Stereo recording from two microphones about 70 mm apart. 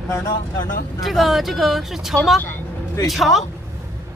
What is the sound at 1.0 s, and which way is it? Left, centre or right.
Speech, centre.